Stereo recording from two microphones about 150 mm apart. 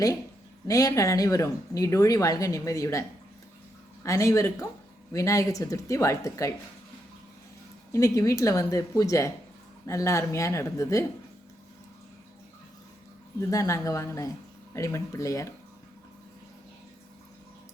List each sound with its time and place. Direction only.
0.7 s speech: 25° left (ahead or behind)
4.0 s speech: 20° left (ahead or behind)
7.9 s speech: 20° left (ahead or behind)
13.5 s speech: 25° left (ahead or behind)